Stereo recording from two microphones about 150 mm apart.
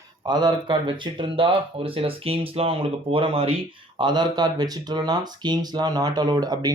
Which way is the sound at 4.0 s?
30° right (ahead or behind).